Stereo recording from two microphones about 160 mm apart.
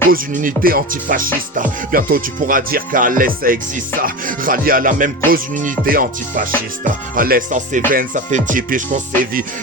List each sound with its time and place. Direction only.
0.1 s speech: 60° right (ahead or behind)